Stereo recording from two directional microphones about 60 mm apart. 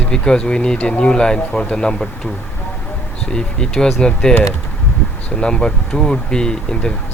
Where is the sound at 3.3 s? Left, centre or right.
Centre.